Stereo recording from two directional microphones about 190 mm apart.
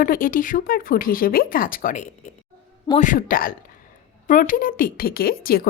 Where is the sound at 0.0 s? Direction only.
45° left (ahead or behind).